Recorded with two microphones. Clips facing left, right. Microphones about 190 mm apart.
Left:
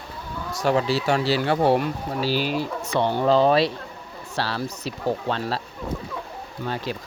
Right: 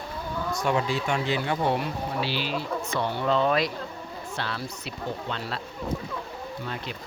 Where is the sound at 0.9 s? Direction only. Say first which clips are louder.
Left 5 dB; 35° left (ahead or behind).